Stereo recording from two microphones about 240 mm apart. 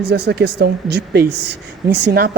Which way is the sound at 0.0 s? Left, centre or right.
Right.